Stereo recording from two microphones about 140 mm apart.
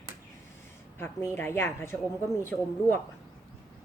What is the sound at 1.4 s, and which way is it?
Speech, 15° left (ahead or behind).